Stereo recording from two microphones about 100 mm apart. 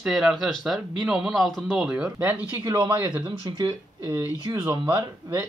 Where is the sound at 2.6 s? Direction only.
45° right (ahead or behind).